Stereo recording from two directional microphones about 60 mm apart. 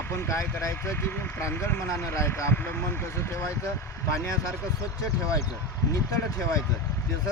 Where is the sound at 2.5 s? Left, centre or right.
Left.